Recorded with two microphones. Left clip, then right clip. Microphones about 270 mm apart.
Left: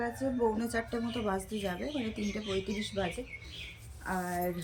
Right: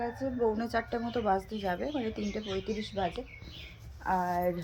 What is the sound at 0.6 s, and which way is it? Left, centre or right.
A woman's voice, centre.